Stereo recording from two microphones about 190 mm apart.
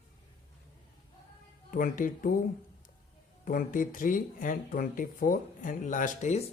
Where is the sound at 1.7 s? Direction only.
45° left (ahead or behind).